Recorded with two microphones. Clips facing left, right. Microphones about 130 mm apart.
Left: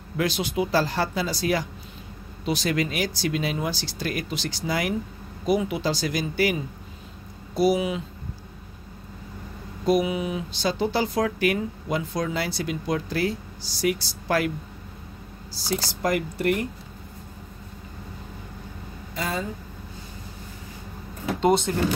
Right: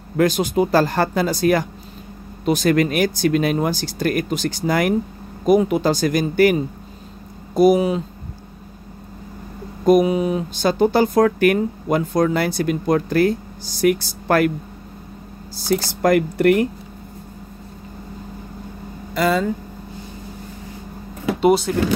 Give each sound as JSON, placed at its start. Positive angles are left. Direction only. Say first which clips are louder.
{"t": 0.2, "sound": "speech", "louder": "right 8 dB", "side_deg": -45}
{"t": 9.8, "sound": "speech", "louder": "right 8 dB", "side_deg": -45}
{"t": 15.5, "sound": "speech", "louder": "right 8 dB", "side_deg": -50}
{"t": 19.1, "sound": "speech", "louder": "right 11 dB", "side_deg": -80}
{"t": 21.4, "sound": "speech", "louder": "right 5 dB", "side_deg": -5}